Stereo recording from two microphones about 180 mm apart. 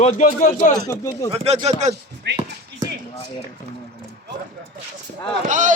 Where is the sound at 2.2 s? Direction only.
70° right (ahead or behind).